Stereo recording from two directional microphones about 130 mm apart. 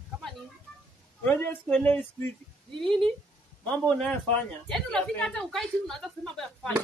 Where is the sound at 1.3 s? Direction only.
15° left (ahead or behind).